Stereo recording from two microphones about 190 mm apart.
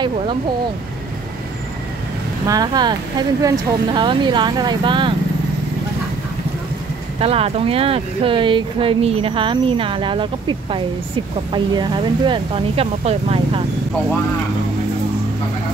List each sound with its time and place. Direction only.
2.4 s speech: 20° right (ahead or behind)
7.2 s speech: 30° right (ahead or behind)